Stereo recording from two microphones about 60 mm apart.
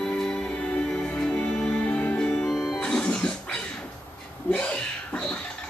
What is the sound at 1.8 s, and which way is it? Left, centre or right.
Music, left.